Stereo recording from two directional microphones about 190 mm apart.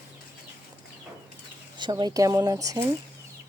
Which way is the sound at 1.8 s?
25° right (ahead or behind).